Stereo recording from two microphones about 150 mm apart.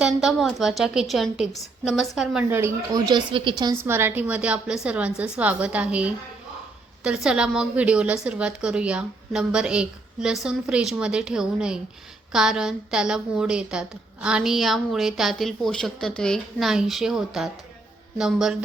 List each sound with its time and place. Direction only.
0.0 s a woman's voice: centre (ahead or behind)
2.6 s a woman's voice: 15° right (ahead or behind)
3.1 s a woman's voice: 30° right (ahead or behind)
3.8 s a woman's voice: 15° right (ahead or behind)